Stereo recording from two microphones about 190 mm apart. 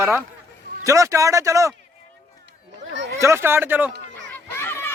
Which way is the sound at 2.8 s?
70° right (ahead or behind).